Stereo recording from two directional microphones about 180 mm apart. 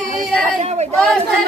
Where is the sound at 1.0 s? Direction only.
Centre (ahead or behind).